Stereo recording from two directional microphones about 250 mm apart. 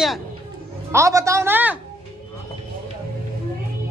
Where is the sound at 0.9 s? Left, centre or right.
Centre.